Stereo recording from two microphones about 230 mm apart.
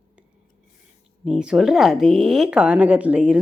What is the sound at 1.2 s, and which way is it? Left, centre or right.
Speech, centre.